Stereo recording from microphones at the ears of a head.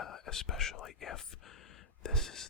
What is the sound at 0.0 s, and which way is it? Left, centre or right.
Whispering, left.